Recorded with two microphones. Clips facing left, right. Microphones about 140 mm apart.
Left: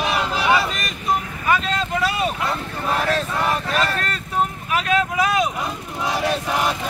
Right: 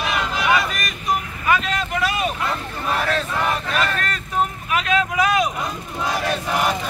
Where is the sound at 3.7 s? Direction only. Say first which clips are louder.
Left 1 dB; 30° left (ahead or behind).